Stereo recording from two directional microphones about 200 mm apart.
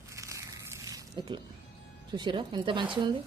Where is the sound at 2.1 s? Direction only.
25° right (ahead or behind).